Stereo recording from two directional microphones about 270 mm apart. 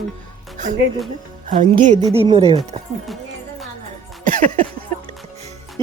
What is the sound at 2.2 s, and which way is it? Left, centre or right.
Speech, right.